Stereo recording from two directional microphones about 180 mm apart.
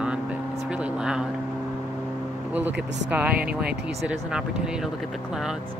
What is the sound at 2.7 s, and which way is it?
Speech, 75° right (ahead or behind).